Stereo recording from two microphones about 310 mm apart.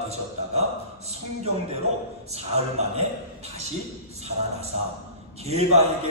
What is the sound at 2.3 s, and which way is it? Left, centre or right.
Speech, right.